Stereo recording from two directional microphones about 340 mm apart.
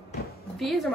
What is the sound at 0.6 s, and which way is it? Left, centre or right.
Speech, centre.